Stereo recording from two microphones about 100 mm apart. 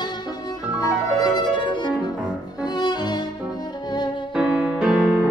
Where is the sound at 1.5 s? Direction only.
50° left (ahead or behind).